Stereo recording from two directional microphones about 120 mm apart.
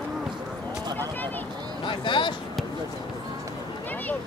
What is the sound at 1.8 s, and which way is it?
Speech, 45° left (ahead or behind).